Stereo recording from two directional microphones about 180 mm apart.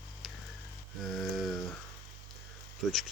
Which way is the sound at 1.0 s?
Centre (ahead or behind).